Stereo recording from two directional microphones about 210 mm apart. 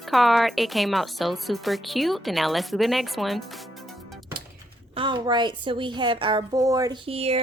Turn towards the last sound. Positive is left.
turn(degrees=-30)  # may be behind; listen again after turning